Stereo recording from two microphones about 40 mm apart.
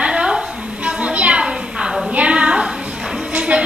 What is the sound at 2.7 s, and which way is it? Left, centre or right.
Music, centre.